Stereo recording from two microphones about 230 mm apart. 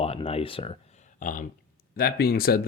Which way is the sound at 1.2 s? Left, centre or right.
Left.